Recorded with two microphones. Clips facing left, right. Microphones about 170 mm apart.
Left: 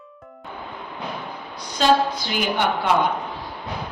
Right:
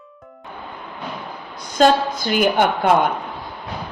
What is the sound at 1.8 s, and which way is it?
A woman's voice, 50° right (ahead or behind).